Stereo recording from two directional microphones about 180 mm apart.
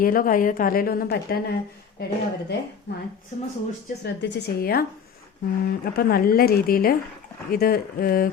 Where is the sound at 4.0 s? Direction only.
70° left (ahead or behind).